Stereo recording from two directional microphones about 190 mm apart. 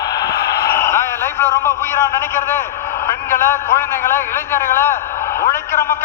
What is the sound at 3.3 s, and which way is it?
A man's voice, 10° left (ahead or behind).